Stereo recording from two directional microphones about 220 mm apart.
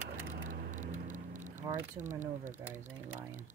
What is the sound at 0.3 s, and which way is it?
Vehicle, 35° right (ahead or behind).